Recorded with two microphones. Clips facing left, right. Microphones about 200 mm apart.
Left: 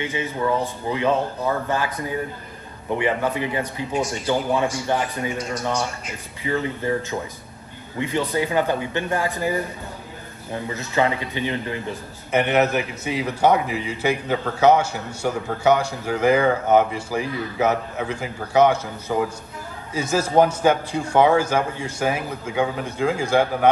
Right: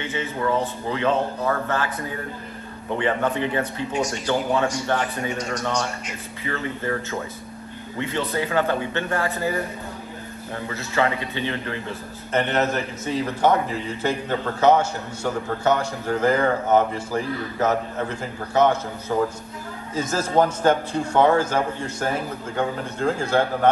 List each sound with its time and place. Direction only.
0.8 s a man's voice: 15° left (ahead or behind)
10.7 s a man's voice: 20° left (ahead or behind)
19.9 s a man's voice: 10° left (ahead or behind)